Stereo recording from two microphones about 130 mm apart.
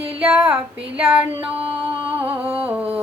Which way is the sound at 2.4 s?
10° right (ahead or behind).